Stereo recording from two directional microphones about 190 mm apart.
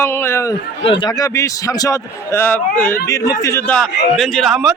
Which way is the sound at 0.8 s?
25° left (ahead or behind).